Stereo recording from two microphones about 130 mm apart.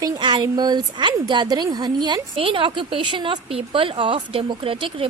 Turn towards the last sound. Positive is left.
turn(degrees=-45)  # may be behind; listen again after turning